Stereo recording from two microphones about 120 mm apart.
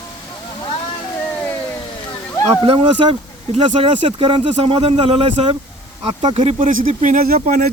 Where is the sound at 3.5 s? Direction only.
60° right (ahead or behind).